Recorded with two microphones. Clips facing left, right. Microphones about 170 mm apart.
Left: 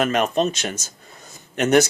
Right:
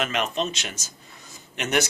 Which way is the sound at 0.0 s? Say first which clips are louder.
Left 7 dB; 45° left (ahead or behind).